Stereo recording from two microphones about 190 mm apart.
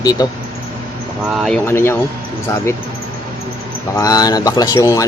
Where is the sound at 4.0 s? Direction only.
20° left (ahead or behind).